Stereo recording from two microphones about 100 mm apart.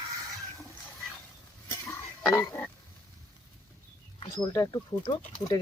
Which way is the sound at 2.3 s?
30° left (ahead or behind).